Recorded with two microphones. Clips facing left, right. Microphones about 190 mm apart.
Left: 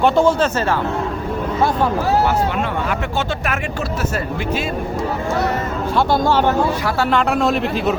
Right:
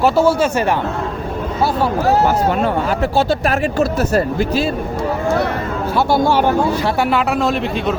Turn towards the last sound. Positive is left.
turn(degrees=0)  # may be behind; listen again after turning